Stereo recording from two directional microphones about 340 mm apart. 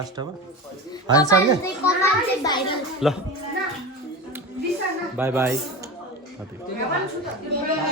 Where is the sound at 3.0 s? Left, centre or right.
Centre.